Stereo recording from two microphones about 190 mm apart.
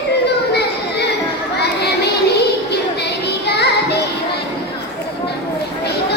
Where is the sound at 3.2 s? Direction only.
60° left (ahead or behind).